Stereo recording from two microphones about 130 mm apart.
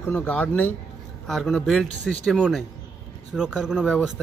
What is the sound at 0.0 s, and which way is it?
A man's voice, 10° left (ahead or behind).